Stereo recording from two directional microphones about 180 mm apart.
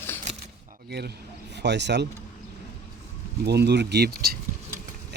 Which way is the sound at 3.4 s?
70° right (ahead or behind).